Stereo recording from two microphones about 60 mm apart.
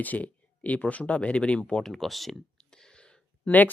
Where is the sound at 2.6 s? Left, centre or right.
Centre.